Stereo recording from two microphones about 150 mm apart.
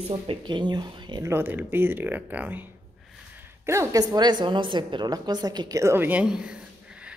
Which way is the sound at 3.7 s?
20° right (ahead or behind).